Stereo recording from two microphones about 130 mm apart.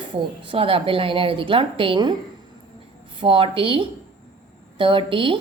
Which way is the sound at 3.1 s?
40° right (ahead or behind).